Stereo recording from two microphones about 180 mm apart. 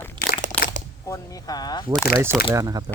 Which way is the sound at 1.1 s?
20° left (ahead or behind).